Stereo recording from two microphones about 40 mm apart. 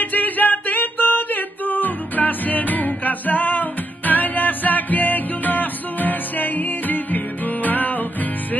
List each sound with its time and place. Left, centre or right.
0.0 s music: left